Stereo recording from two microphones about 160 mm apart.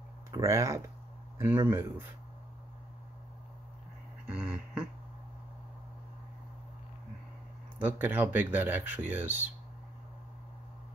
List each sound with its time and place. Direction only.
0.3 s speech: 20° right (ahead or behind)
4.3 s a sound: 5° right (ahead or behind)
7.8 s speech: 10° right (ahead or behind)